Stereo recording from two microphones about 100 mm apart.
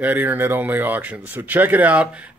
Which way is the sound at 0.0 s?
20° right (ahead or behind).